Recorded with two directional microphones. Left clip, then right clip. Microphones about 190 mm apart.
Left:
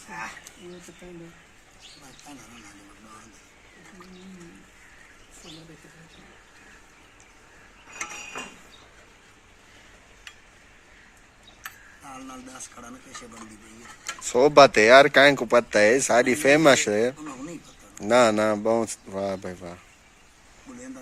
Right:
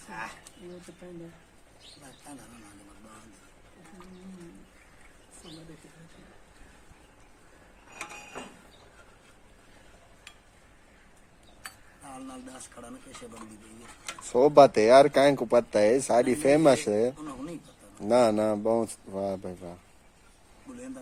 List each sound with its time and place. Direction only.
12.0 s speech: 20° right (ahead or behind)
14.2 s speech: 5° right (ahead or behind)